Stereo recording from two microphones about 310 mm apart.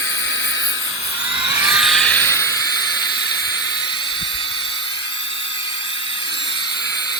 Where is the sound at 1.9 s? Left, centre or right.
Centre.